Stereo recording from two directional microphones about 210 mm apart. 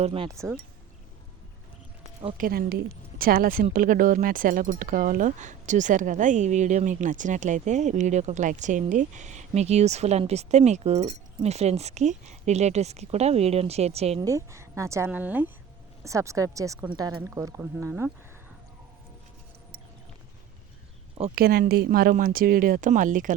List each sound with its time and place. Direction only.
0.0 s speech: 25° right (ahead or behind)
2.4 s a woman's voice: 45° right (ahead or behind); by 14.2 s 30° right (ahead or behind)
14.2 s a woman's voice: 15° right (ahead or behind)
21.3 s speech: 45° right (ahead or behind)